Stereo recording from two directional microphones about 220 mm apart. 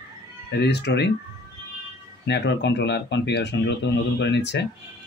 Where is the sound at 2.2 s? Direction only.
50° left (ahead or behind).